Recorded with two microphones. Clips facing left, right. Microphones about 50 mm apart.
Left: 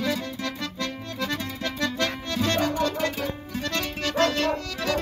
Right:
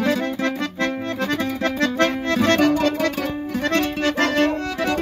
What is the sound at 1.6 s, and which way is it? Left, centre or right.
Accordion, right.